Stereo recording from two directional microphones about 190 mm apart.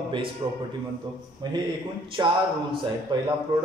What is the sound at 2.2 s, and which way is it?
A man's voice, 20° right (ahead or behind).